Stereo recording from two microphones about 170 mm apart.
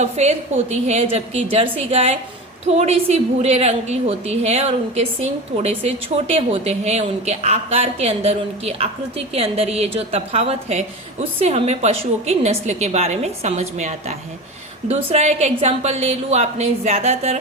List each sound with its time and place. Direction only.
0.0 s a woman's voice: 40° right (ahead or behind)